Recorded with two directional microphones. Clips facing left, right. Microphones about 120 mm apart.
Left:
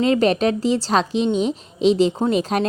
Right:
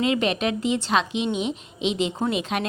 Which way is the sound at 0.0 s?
40° left (ahead or behind).